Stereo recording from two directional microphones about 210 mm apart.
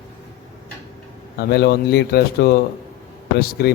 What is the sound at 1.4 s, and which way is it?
A man's voice, 50° left (ahead or behind).